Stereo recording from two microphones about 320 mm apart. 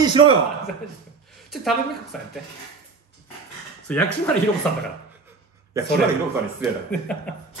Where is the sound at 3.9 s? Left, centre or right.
Centre.